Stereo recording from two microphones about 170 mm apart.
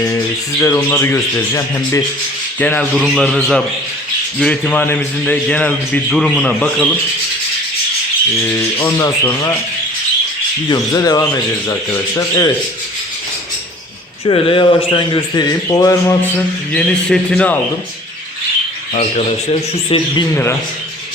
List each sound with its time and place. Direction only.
0.6 s a man's voice: 15° left (ahead or behind)
2.9 s a man's voice: 5° right (ahead or behind)
8.4 s a man's voice: 15° left (ahead or behind)
10.7 s a man's voice: 20° left (ahead or behind)
14.3 s a man's voice: 30° left (ahead or behind)
16.7 s a man's voice: 5° left (ahead or behind)
18.9 s a man's voice: 40° left (ahead or behind)